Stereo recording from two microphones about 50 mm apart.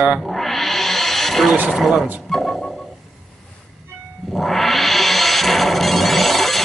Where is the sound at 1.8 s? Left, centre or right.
Centre.